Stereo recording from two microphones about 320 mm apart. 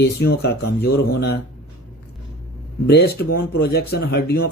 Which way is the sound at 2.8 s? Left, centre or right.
Left.